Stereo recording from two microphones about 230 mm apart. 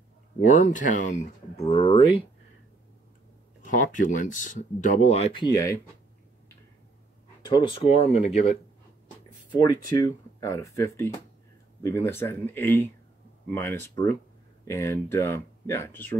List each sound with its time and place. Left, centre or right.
0.5 s speech: left
3.9 s speech: left; by 5.8 s centre
7.4 s speech: centre
9.6 s speech: centre